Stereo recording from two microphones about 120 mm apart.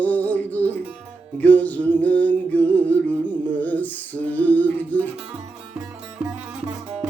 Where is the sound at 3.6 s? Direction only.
15° left (ahead or behind).